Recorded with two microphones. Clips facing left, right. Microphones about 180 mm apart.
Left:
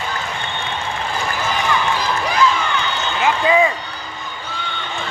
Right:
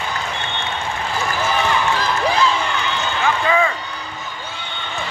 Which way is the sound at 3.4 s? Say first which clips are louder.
Left 4 dB; 15° left (ahead or behind).